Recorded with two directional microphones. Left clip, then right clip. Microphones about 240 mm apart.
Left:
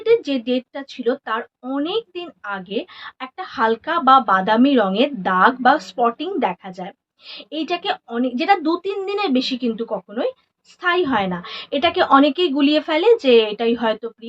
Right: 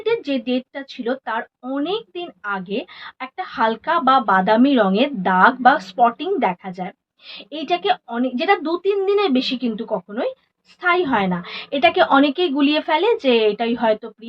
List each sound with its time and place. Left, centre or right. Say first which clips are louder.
0.0 s a woman's voice: left 4 dB; centre